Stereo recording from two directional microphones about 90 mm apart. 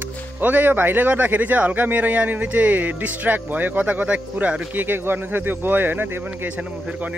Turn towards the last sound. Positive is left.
turn(degrees=-15)  # may be behind; listen again after turning